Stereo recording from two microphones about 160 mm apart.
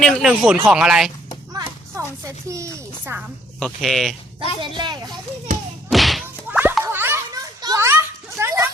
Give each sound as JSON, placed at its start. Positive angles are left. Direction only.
{"t": 0.0, "sound": "speech", "side_deg": 0}
{"t": 1.5, "sound": "a sound", "side_deg": -20}
{"t": 3.6, "sound": "speech", "side_deg": 0}
{"t": 4.6, "sound": "a child's voice", "side_deg": -30}
{"t": 5.5, "sound": "thump", "side_deg": -55}
{"t": 5.9, "sound": "whip", "side_deg": 0}
{"t": 6.5, "sound": "music", "side_deg": -10}
{"t": 6.8, "sound": "a sound", "side_deg": -15}
{"t": 7.6, "sound": "children playing", "side_deg": -20}
{"t": 8.4, "sound": "dog", "side_deg": -15}